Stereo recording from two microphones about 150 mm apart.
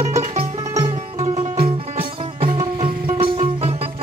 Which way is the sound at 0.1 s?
45° right (ahead or behind).